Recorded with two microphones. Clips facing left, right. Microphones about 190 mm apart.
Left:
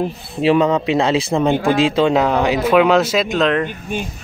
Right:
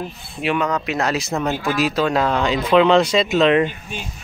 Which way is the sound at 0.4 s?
30° left (ahead or behind).